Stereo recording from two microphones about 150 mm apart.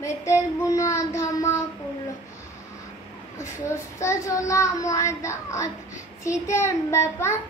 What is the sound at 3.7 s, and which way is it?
A child's voice, 20° left (ahead or behind).